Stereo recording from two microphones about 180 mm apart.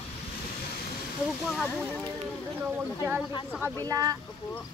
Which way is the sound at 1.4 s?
10° left (ahead or behind).